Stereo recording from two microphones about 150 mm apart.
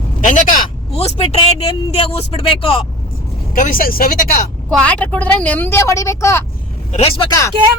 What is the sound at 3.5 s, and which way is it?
Speech, 65° left (ahead or behind).